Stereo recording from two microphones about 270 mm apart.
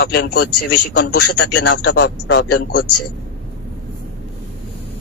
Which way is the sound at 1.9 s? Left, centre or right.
Left.